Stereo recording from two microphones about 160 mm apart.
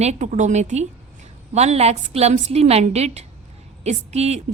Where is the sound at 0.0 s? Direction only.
45° right (ahead or behind).